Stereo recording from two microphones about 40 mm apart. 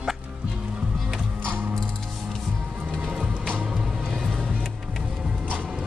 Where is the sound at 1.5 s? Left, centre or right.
Right.